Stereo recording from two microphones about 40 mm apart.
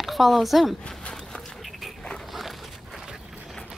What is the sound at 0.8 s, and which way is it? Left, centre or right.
Walk, centre.